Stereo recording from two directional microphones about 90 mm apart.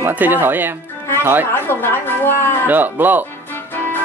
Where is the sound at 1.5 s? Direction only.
25° left (ahead or behind).